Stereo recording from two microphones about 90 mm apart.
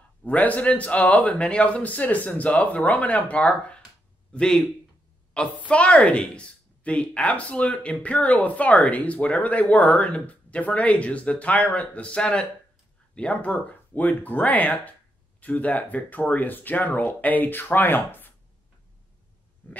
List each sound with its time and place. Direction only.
0.2 s a woman's voice: 15° left (ahead or behind)